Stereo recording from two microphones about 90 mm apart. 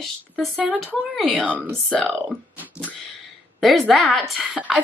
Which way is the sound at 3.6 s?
Centre (ahead or behind).